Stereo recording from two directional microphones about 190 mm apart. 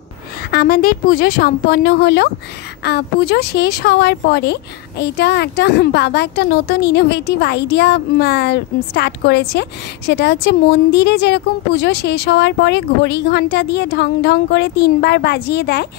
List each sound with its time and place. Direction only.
0.5 s a woman's voice: 50° left (ahead or behind)